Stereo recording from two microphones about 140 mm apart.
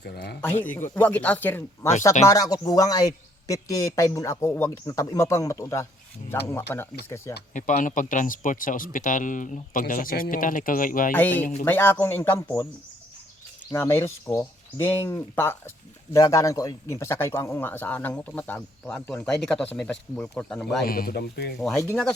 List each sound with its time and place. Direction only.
0.6 s a man's voice: 15° left (ahead or behind)
2.2 s a man's voice: 25° left (ahead or behind)
7.5 s speech: 60° left (ahead or behind); by 11.1 s 75° left (ahead or behind)
11.1 s a man's voice: 15° left (ahead or behind)
13.7 s a man's voice: 20° left (ahead or behind); by 20.8 s 5° left (ahead or behind)
20.8 s speech: 90° left